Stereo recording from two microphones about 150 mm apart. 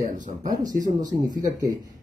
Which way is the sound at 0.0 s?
55° right (ahead or behind).